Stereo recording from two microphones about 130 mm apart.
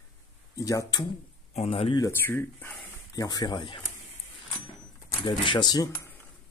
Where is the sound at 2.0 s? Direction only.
20° left (ahead or behind).